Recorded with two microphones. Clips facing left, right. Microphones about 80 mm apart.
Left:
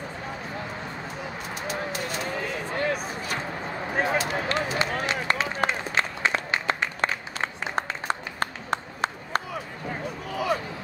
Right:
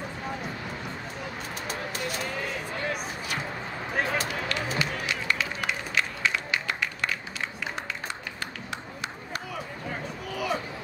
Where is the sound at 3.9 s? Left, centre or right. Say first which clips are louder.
Left 3 dB; left.